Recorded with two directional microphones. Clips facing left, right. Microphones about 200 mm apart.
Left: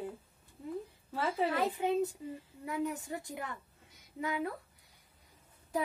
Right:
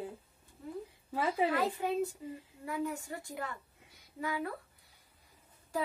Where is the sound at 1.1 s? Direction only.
10° right (ahead or behind).